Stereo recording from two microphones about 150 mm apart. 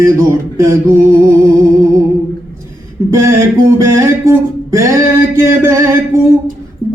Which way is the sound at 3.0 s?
20° right (ahead or behind).